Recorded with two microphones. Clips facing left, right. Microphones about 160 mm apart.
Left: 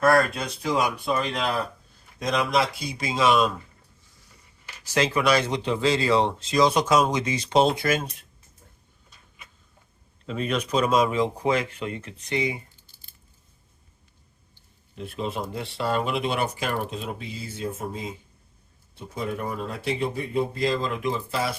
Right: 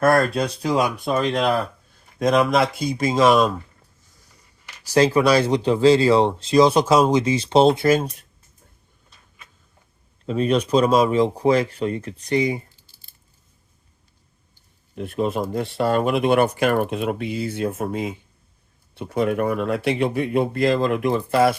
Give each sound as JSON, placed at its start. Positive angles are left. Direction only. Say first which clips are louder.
{"t": 1.0, "sound": "speech", "louder": "right 6 dB", "side_deg": -50}
{"t": 4.8, "sound": "speech", "louder": "right 7 dB", "side_deg": -35}
{"t": 10.2, "sound": "speech", "louder": "right 7 dB", "side_deg": -35}
{"t": 14.9, "sound": "speech", "louder": "right 7 dB", "side_deg": -50}